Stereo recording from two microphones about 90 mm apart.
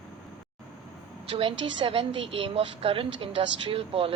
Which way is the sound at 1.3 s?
75° right (ahead or behind).